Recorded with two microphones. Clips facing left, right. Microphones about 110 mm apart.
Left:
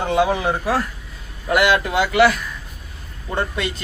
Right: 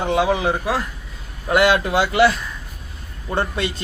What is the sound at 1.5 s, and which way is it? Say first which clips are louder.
Speech: right 1 dB; 25° right (ahead or behind).